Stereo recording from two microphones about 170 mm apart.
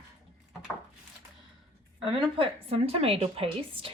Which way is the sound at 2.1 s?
30° right (ahead or behind).